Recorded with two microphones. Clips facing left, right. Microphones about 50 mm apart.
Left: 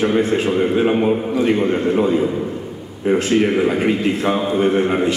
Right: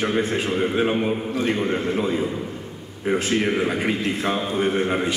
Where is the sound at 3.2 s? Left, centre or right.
Centre.